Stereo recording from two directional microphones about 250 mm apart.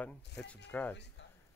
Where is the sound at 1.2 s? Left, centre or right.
Left.